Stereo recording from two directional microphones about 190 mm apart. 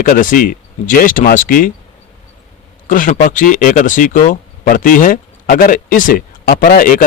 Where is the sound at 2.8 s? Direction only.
45° left (ahead or behind).